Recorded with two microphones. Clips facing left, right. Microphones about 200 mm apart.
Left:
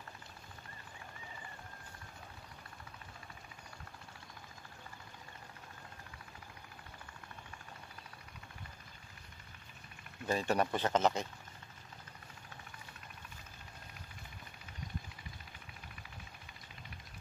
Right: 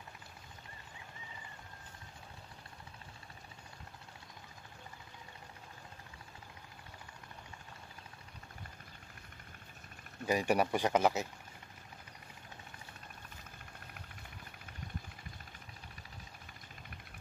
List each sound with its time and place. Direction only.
10.2 s speech: 15° right (ahead or behind)